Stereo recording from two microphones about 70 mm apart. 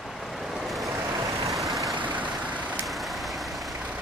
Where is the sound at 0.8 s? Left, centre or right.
Right.